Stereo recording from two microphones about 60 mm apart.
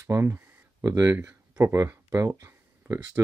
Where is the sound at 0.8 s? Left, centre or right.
Right.